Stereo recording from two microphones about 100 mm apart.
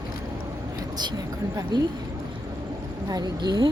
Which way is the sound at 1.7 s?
50° right (ahead or behind).